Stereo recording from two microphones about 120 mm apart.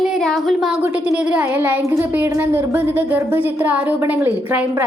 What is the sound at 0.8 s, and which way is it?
A woman's voice, 10° right (ahead or behind).